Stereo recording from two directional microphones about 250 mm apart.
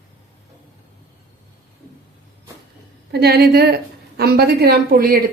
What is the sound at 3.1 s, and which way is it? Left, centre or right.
A woman's voice, right.